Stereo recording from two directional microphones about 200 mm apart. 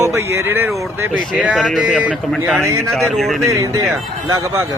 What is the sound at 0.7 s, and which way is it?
Speech, centre (ahead or behind).